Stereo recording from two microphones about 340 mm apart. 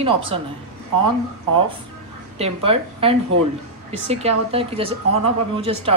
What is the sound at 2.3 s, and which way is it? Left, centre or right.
Speech, centre.